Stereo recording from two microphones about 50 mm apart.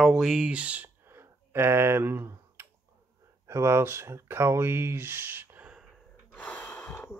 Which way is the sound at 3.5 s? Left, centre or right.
Right.